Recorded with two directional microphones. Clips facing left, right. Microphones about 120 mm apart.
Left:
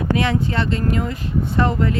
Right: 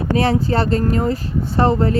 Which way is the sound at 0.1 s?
35° right (ahead or behind).